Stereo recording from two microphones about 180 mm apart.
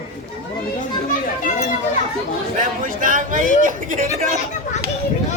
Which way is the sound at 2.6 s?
45° right (ahead or behind).